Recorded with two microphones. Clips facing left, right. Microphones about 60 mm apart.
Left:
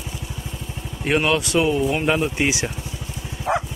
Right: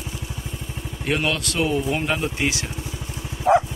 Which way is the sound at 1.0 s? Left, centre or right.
Left.